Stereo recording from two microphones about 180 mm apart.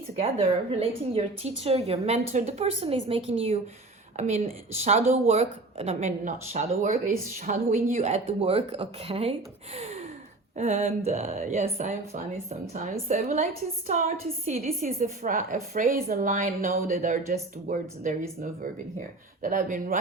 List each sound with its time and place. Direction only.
0.2 s speech: 30° right (ahead or behind)
4.2 s speech: 45° right (ahead or behind)
9.7 s gasp: 35° right (ahead or behind)
10.6 s a woman's voice: 35° right (ahead or behind)